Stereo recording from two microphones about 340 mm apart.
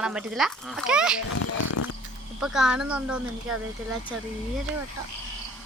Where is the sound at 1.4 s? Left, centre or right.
Left.